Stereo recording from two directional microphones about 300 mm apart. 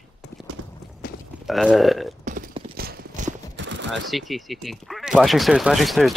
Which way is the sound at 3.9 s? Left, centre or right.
Centre.